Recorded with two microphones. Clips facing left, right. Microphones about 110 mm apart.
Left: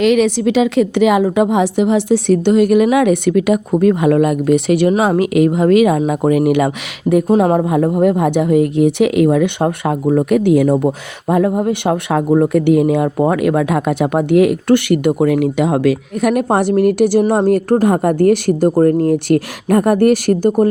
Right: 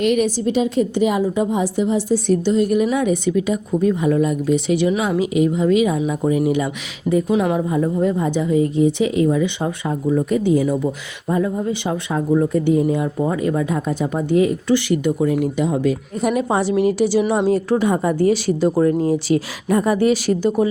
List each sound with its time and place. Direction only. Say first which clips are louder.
0.0 s speech: left 5 dB; 90° left; by 6.7 s 70° left (ahead or behind)
7.3 s speech: left 8 dB; 45° left (ahead or behind)
7.6 s speech: left 5 dB; 65° left (ahead or behind)